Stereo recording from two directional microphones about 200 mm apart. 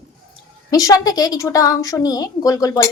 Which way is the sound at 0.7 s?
15° left (ahead or behind).